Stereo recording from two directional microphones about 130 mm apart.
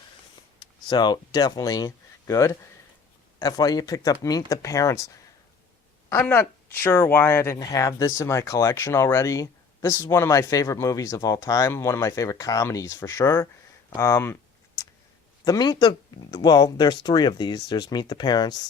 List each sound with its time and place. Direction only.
0.6 s speech: 35° left (ahead or behind)
15.4 s speech: 30° left (ahead or behind)